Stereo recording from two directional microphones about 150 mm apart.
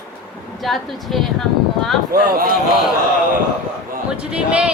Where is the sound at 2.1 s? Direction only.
70° right (ahead or behind).